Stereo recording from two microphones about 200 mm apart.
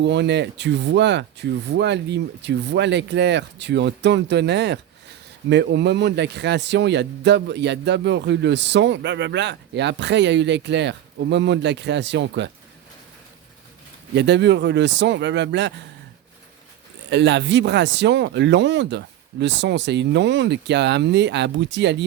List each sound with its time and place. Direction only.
0.0 s speech: 60° right (ahead or behind)
14.2 s speech: 60° right (ahead or behind)
17.1 s speech: 60° right (ahead or behind)